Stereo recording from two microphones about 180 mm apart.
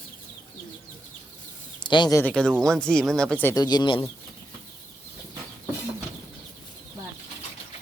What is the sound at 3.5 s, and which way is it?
Speech, 20° left (ahead or behind).